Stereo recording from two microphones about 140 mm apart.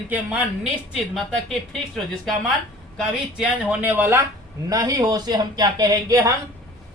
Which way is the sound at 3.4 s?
10° right (ahead or behind).